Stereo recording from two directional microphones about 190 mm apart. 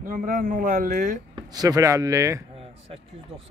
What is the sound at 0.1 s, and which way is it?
Speech, 45° right (ahead or behind).